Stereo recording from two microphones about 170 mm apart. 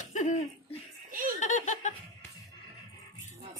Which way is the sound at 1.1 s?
55° right (ahead or behind).